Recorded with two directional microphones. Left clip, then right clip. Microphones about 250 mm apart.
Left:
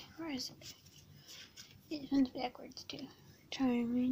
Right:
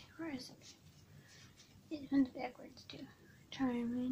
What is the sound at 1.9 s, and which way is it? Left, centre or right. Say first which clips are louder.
A woman's voice: left 1 dB; left.